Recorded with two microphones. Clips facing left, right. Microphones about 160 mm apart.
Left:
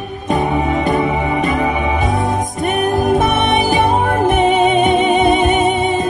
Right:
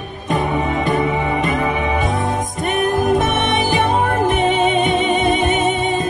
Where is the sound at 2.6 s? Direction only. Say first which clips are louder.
Left 2 dB; 45° left (ahead or behind).